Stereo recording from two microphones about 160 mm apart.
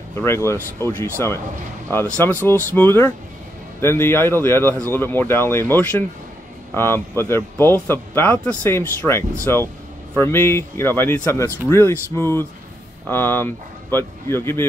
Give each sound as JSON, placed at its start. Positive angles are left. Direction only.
{"t": 0.1, "sound": "speech", "side_deg": 15}